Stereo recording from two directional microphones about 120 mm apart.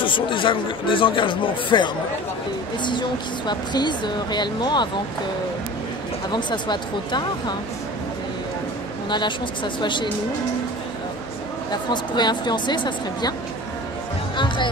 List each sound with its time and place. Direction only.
0.0 s speech: 45° left (ahead or behind)
6.3 s speech: 40° left (ahead or behind)
9.1 s speech: 40° left (ahead or behind)
11.7 s speech: 40° left (ahead or behind)
14.3 s speech: 40° left (ahead or behind)